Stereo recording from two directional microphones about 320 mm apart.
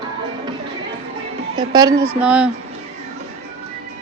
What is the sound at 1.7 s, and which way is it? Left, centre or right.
Speech, centre.